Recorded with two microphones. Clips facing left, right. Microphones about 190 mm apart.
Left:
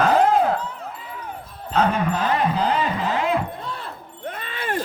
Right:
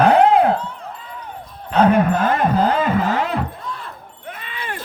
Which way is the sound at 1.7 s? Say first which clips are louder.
Right 6 dB; 60° right (ahead or behind).